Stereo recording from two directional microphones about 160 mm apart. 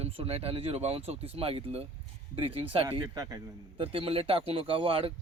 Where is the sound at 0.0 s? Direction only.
40° right (ahead or behind).